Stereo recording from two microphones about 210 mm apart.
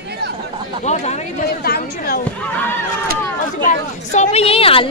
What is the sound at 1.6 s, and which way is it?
Speech, 45° left (ahead or behind).